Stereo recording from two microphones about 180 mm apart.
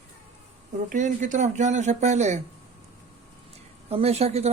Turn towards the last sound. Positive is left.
turn(degrees=-35)  # may be behind; listen again after turning